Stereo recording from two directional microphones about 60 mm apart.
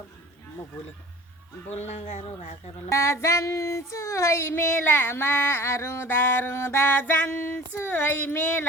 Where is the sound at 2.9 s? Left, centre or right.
Left.